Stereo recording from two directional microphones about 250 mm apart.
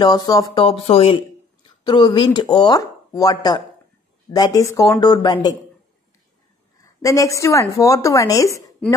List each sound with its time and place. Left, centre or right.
0.0 s a woman's voice: centre
6.8 s a woman's voice: centre